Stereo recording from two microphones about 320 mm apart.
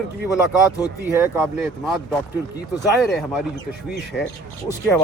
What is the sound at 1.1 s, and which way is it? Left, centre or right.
Speech, centre.